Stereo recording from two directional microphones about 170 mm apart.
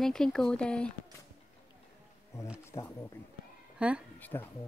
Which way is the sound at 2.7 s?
15° left (ahead or behind).